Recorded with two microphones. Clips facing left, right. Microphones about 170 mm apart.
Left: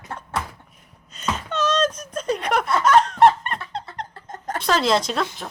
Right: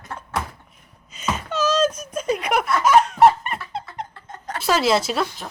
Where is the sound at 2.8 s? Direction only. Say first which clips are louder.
Right 1 dB; 10° right (ahead or behind).